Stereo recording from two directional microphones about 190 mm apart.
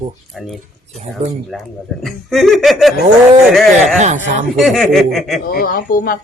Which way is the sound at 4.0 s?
40° right (ahead or behind).